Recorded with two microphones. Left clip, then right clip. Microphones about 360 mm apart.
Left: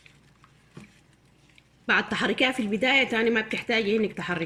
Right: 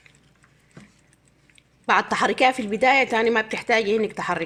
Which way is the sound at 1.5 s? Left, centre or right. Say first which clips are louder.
Right 4 dB; centre.